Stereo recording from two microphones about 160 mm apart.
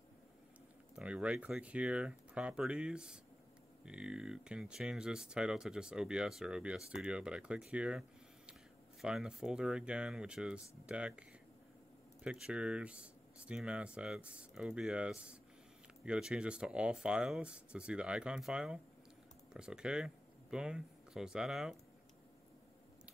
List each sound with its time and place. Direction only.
0.9 s speech: 5° right (ahead or behind)
9.0 s speech: 5° right (ahead or behind)